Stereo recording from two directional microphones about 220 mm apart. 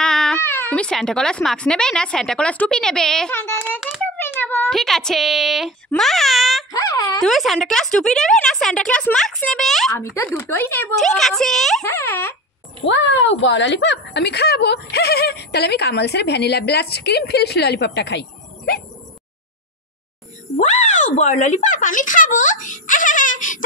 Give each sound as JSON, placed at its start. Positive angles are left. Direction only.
{"t": 0.0, "sound": "speech", "side_deg": 5}
{"t": 3.8, "sound": "a sound", "side_deg": 0}
{"t": 4.2, "sound": "speech", "side_deg": 10}
{"t": 6.7, "sound": "a sound", "side_deg": 15}
{"t": 7.2, "sound": "speech", "side_deg": 0}
{"t": 9.9, "sound": "a child's voice", "side_deg": 15}
{"t": 12.8, "sound": "speech", "side_deg": 60}
{"t": 20.5, "sound": "speech", "side_deg": 30}